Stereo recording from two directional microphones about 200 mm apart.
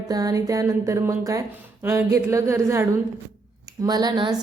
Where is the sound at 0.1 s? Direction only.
20° right (ahead or behind).